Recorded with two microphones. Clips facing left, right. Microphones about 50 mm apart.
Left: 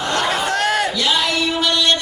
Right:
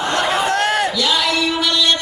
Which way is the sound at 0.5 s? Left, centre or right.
Right.